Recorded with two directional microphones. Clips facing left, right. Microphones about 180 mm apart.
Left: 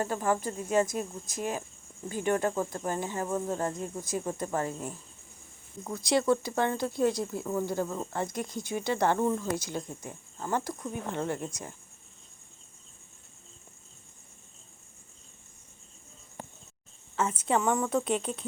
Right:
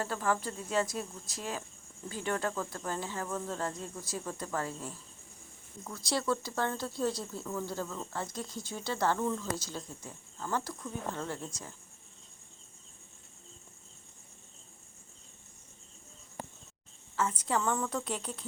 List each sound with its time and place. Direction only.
0.0 s speech: 20° left (ahead or behind)
17.2 s speech: 25° left (ahead or behind)